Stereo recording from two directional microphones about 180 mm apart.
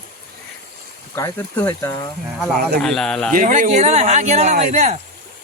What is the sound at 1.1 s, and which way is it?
Speech, 15° left (ahead or behind).